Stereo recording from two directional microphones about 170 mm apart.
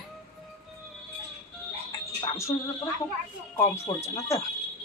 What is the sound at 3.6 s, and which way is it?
Speech, 15° left (ahead or behind).